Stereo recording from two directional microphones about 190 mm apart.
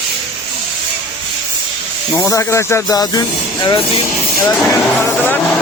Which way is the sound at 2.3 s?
15° left (ahead or behind).